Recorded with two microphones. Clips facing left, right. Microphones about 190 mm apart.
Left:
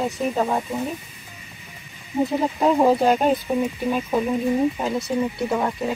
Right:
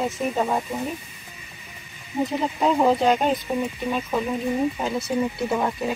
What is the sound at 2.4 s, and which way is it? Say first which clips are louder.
Speech: left 2 dB; 5° left (ahead or behind).